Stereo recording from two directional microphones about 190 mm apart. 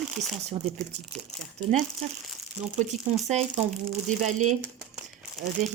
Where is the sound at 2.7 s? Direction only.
40° right (ahead or behind).